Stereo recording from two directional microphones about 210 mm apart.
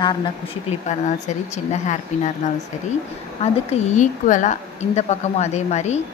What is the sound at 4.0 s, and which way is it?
A woman's voice, 35° left (ahead or behind).